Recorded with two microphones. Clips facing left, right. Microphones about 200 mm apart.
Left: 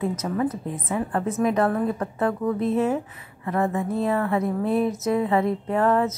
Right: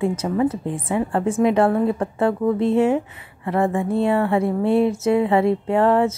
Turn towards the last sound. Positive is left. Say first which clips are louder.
# right 4 dB
turn(degrees=-30)  # may be behind; listen again after turning